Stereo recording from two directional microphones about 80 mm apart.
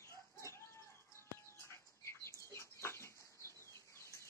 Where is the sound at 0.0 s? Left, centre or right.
Left.